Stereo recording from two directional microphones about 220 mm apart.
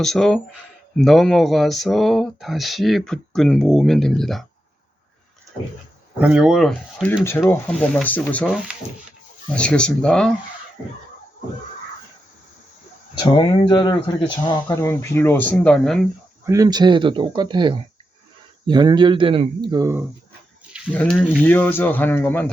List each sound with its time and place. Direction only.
0.0 s speech: centre (ahead or behind)
6.1 s speech: 5° right (ahead or behind)
13.1 s speech: 20° left (ahead or behind); by 16.0 s centre (ahead or behind)
16.5 s speech: 15° right (ahead or behind)
20.9 s speech: 5° left (ahead or behind)